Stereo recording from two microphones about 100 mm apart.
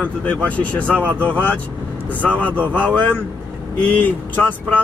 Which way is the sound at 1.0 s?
15° right (ahead or behind).